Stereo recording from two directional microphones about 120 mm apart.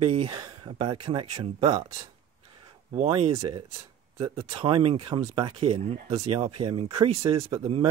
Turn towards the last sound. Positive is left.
turn(degrees=-50)  # may be behind; listen again after turning